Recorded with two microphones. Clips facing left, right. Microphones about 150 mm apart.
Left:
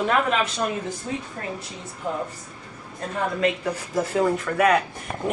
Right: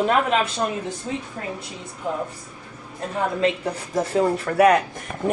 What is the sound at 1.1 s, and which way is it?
Speech, 20° right (ahead or behind).